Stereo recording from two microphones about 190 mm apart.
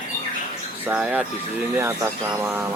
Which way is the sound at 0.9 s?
5° right (ahead or behind).